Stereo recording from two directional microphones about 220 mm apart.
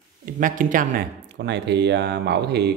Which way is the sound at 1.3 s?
50° right (ahead or behind).